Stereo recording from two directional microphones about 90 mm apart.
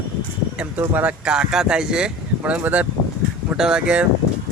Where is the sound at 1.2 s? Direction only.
10° right (ahead or behind).